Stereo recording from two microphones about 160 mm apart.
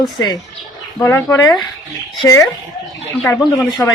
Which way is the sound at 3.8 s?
15° left (ahead or behind).